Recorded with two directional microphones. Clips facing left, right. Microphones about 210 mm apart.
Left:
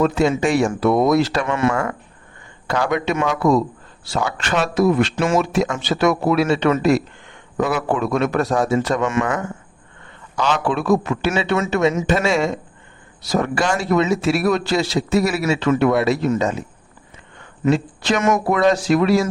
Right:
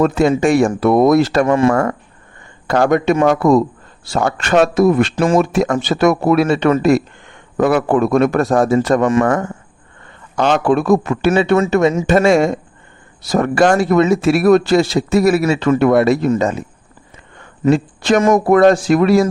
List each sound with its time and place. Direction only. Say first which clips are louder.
0.0 s a man's voice: right 4 dB; 50° right (ahead or behind)
1.5 s speech: right 6 dB; 30° right (ahead or behind)
1.7 s a man's voice: right 6 dB; 50° right (ahead or behind)
5.1 s speech: right 4 dB; 35° right (ahead or behind)
5.4 s a man's voice: right 5 dB; 50° right (ahead or behind)
10.3 s a man's voice: right 6 dB; 55° right (ahead or behind)
17.7 s speech: right 5 dB; 50° right (ahead or behind)
18.2 s speech: right 5 dB; 35° right (ahead or behind)
18.4 s a man's voice: right 6 dB; 50° right (ahead or behind)